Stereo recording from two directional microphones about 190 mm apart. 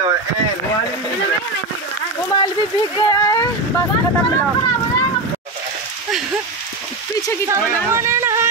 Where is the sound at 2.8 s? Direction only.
20° left (ahead or behind).